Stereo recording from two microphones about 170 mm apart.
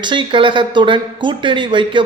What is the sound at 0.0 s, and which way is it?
Speech, 30° right (ahead or behind).